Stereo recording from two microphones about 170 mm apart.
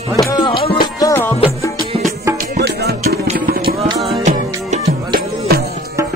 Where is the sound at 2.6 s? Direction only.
70° right (ahead or behind).